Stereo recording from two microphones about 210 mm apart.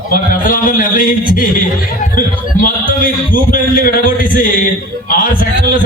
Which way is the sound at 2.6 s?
40° left (ahead or behind).